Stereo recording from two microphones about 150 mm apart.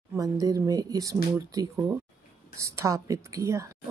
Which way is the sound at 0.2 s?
20° right (ahead or behind).